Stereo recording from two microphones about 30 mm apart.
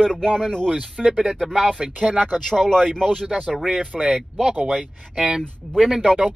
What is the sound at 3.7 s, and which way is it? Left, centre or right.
Speech, right.